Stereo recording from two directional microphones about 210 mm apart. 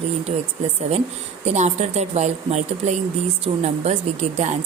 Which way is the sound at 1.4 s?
35° right (ahead or behind).